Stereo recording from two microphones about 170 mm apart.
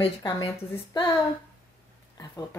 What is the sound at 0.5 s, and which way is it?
Speech, 15° left (ahead or behind).